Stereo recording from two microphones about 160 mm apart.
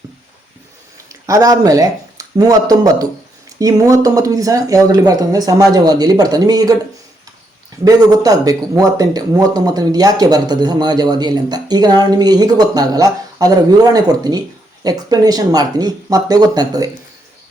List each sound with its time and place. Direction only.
1.3 s a man's voice: 20° right (ahead or behind)
7.9 s a man's voice: 25° right (ahead or behind)